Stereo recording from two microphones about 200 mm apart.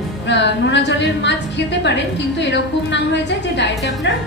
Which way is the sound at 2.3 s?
60° left (ahead or behind).